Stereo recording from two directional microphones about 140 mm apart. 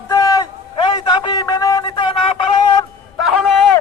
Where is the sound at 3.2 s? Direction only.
Centre (ahead or behind).